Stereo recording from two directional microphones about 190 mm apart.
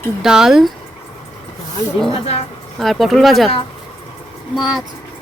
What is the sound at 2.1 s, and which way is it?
Speech, 30° left (ahead or behind).